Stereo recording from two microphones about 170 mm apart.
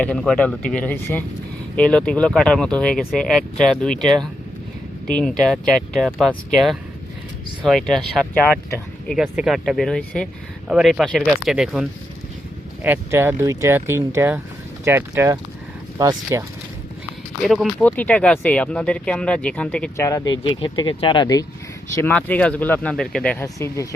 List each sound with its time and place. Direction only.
0.0 s speech: 5° left (ahead or behind); by 16.4 s 20° right (ahead or behind)
17.4 s speech: centre (ahead or behind)
20.0 s speech: 20° left (ahead or behind)
21.9 s speech: 10° left (ahead or behind)
23.6 s speech: 20° left (ahead or behind)